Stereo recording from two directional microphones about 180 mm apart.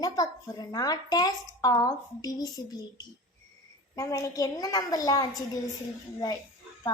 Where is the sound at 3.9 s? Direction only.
20° left (ahead or behind).